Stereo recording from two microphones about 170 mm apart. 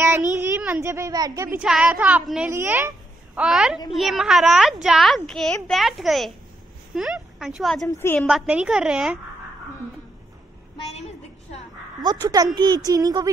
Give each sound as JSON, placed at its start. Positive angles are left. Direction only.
{"t": 0.4, "sound": "a woman's voice", "side_deg": -10}
{"t": 1.6, "sound": "a woman's voice", "side_deg": -5}
{"t": 3.3, "sound": "a child's voice", "side_deg": -5}
{"t": 7.3, "sound": "a child's voice", "side_deg": 0}
{"t": 12.0, "sound": "a child's voice", "side_deg": -20}